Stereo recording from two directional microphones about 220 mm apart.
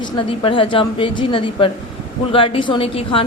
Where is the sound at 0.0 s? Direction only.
25° left (ahead or behind).